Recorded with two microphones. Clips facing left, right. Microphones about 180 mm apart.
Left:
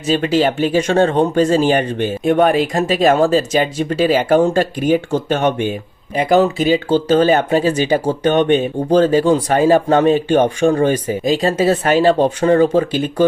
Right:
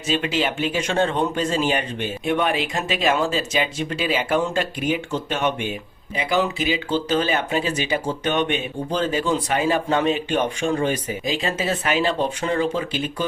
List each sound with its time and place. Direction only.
0.1 s speech: 40° left (ahead or behind)